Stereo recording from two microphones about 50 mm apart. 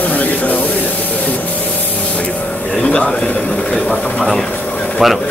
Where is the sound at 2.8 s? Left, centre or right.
Left.